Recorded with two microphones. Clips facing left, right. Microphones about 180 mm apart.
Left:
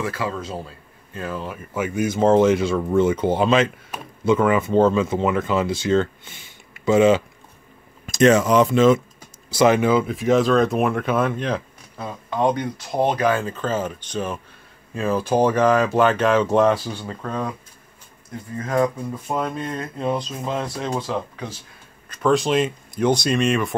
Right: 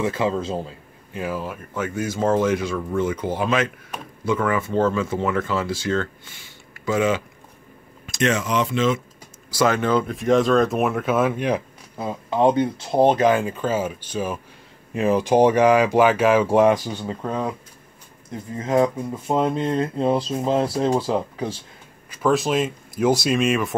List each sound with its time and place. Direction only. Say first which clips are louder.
0.0 s speech: right 4 dB; 25° right (ahead or behind); by 1.6 s 5° right (ahead or behind)
1.7 s speech: left 4 dB; 15° left (ahead or behind)
8.1 s speech: left 7 dB; 40° left (ahead or behind)
9.5 s speech: left 3 dB; 20° left (ahead or behind); by 11.6 s 10° right (ahead or behind)
12.0 s speech: right 3 dB; 25° right (ahead or behind); by 14.4 s 5° right (ahead or behind)
15.0 s speech: right 3 dB; 15° right (ahead or behind)
18.6 s speech: right 2 dB; 20° right (ahead or behind)
22.1 s speech: left 1 dB; 5° right (ahead or behind)